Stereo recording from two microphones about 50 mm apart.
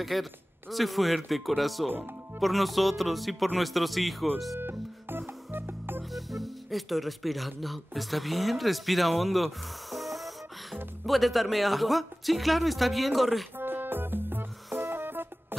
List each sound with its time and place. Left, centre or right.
0.0 s speech: centre
4.6 s music: right
6.1 s speech: centre
13.6 s music: right